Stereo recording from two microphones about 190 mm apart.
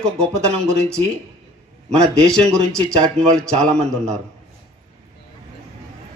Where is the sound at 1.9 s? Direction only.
5° left (ahead or behind).